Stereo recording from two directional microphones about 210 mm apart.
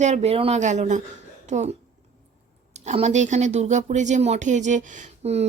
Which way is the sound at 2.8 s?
35° right (ahead or behind).